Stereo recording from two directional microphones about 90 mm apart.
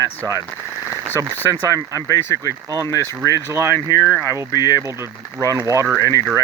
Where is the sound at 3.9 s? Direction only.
45° left (ahead or behind).